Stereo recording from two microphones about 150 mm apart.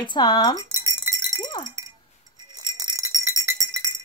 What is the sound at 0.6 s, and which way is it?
Chink, 20° right (ahead or behind).